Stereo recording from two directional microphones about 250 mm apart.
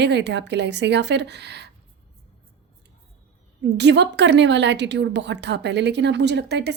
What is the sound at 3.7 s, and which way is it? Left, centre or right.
A woman's voice, right.